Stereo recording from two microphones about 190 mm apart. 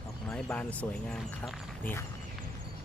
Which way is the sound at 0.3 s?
5° left (ahead or behind).